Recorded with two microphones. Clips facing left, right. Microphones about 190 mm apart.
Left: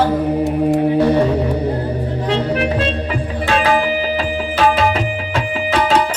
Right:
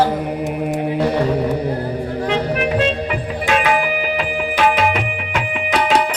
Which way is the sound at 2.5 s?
30° left (ahead or behind).